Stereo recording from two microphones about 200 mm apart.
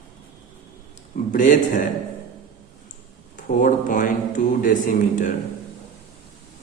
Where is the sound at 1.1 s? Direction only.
40° left (ahead or behind).